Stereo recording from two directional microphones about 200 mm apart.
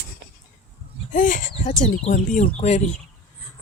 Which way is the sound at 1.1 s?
40° left (ahead or behind).